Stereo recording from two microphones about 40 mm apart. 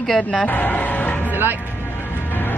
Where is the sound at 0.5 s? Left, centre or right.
Left.